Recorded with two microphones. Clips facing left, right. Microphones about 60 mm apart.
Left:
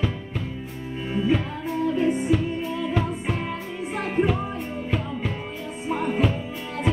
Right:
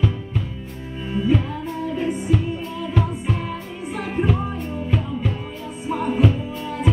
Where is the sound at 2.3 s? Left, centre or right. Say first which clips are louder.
Even; centre.